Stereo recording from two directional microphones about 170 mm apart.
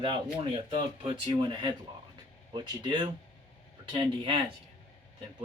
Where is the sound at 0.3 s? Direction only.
35° right (ahead or behind).